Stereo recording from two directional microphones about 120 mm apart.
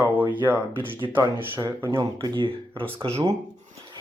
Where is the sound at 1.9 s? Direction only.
35° right (ahead or behind); by 3.3 s 55° right (ahead or behind).